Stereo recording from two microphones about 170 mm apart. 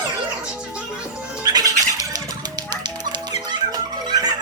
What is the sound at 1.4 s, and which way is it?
Music, 20° right (ahead or behind).